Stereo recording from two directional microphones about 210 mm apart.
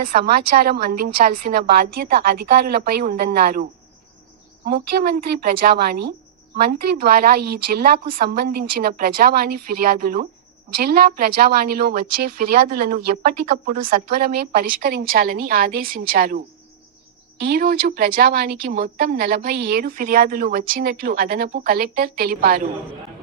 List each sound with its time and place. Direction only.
0.2 s speech: 50° right (ahead or behind)
17.4 s speech: 45° right (ahead or behind)